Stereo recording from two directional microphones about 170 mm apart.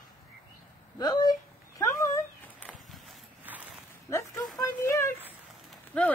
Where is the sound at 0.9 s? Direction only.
25° left (ahead or behind).